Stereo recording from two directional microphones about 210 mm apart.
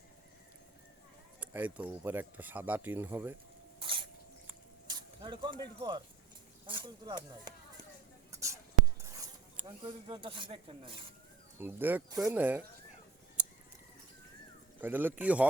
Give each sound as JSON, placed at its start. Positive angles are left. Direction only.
{"t": 1.4, "sound": "speech", "side_deg": -5}
{"t": 3.8, "sound": "rodents", "side_deg": -25}
{"t": 4.9, "sound": "speech", "side_deg": -20}
{"t": 8.3, "sound": "a sound", "side_deg": -15}
{"t": 9.0, "sound": "speech", "side_deg": -15}
{"t": 11.6, "sound": "speech", "side_deg": -10}
{"t": 13.4, "sound": "a sound", "side_deg": -5}
{"t": 14.8, "sound": "speech", "side_deg": -10}